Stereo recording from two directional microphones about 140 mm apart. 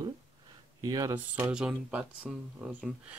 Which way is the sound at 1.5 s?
5° right (ahead or behind).